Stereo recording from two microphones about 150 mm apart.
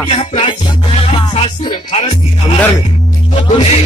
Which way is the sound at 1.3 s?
55° left (ahead or behind).